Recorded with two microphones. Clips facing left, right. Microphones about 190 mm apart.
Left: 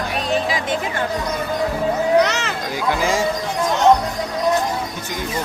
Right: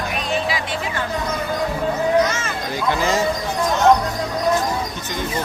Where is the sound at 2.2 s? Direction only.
70° left (ahead or behind).